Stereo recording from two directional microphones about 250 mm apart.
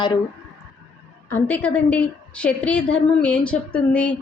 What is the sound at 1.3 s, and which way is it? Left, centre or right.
A woman's voice, centre.